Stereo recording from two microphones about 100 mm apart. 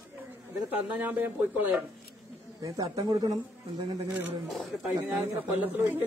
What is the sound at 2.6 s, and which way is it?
Speech, 45° right (ahead or behind).